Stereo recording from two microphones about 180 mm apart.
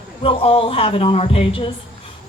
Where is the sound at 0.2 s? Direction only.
30° left (ahead or behind).